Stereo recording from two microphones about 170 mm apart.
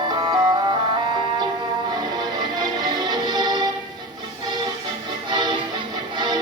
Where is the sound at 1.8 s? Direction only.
25° right (ahead or behind).